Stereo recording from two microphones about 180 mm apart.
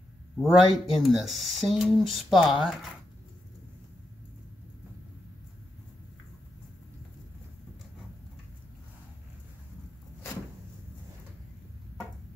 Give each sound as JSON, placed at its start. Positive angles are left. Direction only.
{"t": 0.4, "sound": "speech", "side_deg": 0}